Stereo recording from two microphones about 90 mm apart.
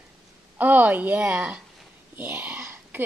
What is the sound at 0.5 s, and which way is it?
A woman's voice, 20° right (ahead or behind).